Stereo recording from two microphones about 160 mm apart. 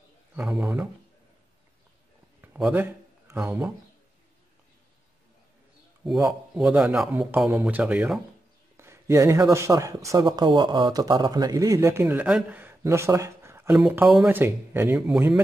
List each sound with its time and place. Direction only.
0.4 s speech: 15° right (ahead or behind)
2.6 s speech: 10° right (ahead or behind)
6.0 s speech: 5° right (ahead or behind)
14.4 s speech: 15° right (ahead or behind)